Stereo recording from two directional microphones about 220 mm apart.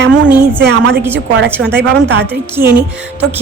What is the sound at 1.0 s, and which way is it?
Speech, 10° right (ahead or behind).